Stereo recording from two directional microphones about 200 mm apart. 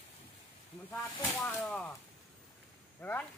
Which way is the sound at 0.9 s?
15° left (ahead or behind).